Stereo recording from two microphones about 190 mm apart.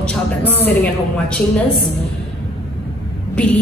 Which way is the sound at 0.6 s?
10° left (ahead or behind).